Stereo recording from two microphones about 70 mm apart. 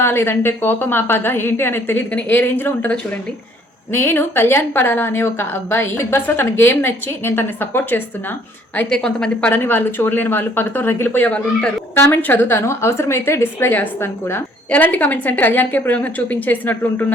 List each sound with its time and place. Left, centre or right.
0.0 s a woman's voice: left
3.9 s a woman's voice: left
8.9 s a woman's voice: centre
9.6 s a woman's voice: left
11.9 s a woman's voice: left